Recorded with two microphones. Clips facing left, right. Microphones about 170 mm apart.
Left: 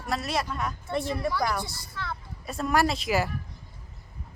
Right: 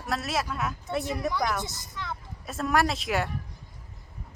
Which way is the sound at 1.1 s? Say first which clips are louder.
Left 1 dB; 20° right (ahead or behind).